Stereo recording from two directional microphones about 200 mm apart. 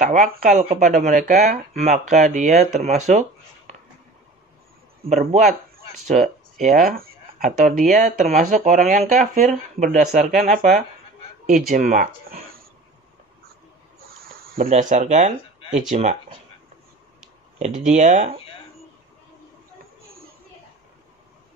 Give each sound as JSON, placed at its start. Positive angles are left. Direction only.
{"t": 0.1, "sound": "speech", "side_deg": -40}
{"t": 0.6, "sound": "speech", "side_deg": -35}
{"t": 5.2, "sound": "speech", "side_deg": -40}
{"t": 6.9, "sound": "speech", "side_deg": -50}
{"t": 14.7, "sound": "speech", "side_deg": -40}
{"t": 17.6, "sound": "speech", "side_deg": -40}